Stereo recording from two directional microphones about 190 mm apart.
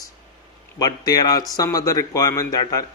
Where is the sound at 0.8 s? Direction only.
20° left (ahead or behind).